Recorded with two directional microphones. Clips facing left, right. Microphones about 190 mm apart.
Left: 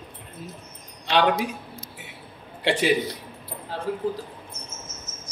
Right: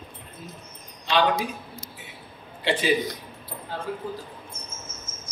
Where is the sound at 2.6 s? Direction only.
75° left (ahead or behind).